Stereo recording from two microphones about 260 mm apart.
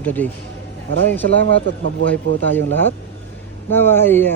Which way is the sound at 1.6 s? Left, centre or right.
Right.